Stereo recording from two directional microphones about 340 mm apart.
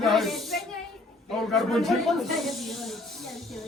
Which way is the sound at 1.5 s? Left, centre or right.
Centre.